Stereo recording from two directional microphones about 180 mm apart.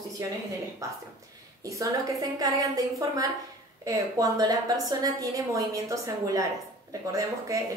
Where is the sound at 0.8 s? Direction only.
20° right (ahead or behind).